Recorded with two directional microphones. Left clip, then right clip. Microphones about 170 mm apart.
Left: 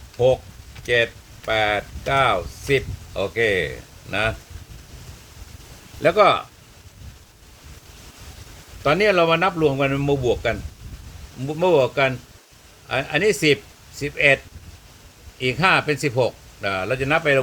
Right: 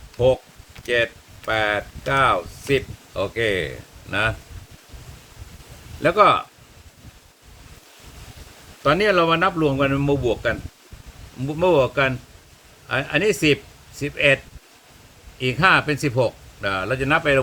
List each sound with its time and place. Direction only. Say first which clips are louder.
0.9 s speech: left 1 dB; 50° right (ahead or behind)
6.0 s speech: even; 50° right (ahead or behind)
8.8 s speech: even; 45° right (ahead or behind)
15.4 s speech: right 1 dB; 45° right (ahead or behind)